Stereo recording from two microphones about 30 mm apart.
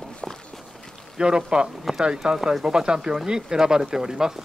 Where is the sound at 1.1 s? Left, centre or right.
Right.